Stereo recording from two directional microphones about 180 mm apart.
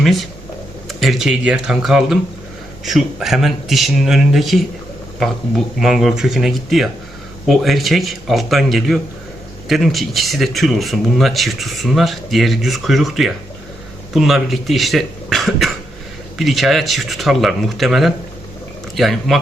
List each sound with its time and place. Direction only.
0.0 s speech: centre (ahead or behind)